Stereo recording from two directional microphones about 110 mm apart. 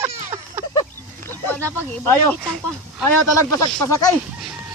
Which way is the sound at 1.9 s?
15° left (ahead or behind).